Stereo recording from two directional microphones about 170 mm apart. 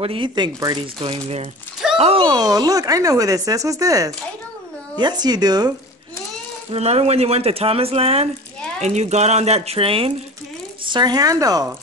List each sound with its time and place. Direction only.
0.0 s speech: 30° right (ahead or behind)
2.0 s speech: 35° right (ahead or behind)
2.2 s speech: 20° right (ahead or behind)
6.7 s speech: 40° right (ahead or behind); by 11.6 s 20° right (ahead or behind)